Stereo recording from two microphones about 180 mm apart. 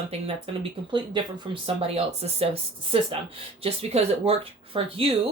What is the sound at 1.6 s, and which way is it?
A woman's voice, 35° right (ahead or behind).